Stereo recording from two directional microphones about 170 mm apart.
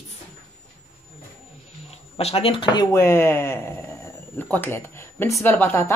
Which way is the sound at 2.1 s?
35° left (ahead or behind).